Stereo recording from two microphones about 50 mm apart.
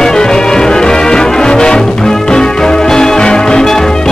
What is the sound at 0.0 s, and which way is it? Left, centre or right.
Music, centre.